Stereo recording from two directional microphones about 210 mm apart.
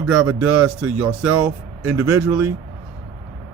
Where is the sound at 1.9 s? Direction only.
5° right (ahead or behind).